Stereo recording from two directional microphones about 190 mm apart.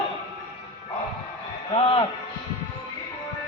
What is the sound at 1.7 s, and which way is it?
Speech, 30° left (ahead or behind).